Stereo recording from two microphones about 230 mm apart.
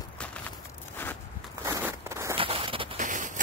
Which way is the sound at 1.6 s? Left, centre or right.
Centre.